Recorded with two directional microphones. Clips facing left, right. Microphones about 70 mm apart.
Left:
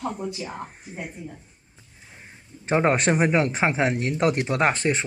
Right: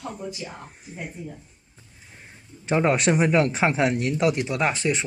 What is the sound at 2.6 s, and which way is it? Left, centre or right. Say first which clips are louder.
Speech: even; left.